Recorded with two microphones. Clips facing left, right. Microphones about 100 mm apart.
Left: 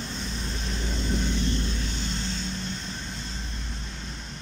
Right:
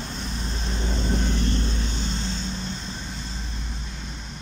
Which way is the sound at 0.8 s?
25° right (ahead or behind).